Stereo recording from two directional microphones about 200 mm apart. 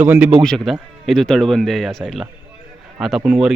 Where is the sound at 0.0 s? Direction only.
10° right (ahead or behind).